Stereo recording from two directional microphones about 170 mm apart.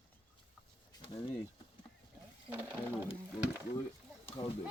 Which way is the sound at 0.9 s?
25° left (ahead or behind).